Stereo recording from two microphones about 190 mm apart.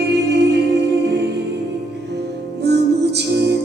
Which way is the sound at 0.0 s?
60° right (ahead or behind).